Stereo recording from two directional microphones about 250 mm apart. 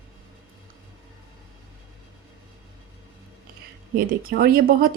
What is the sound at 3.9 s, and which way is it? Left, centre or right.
Speech, right.